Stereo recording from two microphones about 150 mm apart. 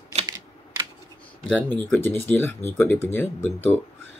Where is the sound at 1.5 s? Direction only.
5° left (ahead or behind).